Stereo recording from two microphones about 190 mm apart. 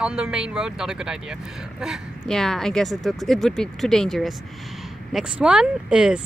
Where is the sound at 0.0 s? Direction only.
5° right (ahead or behind).